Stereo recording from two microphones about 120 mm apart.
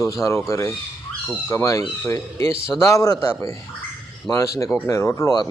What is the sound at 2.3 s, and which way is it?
Speech, 55° right (ahead or behind).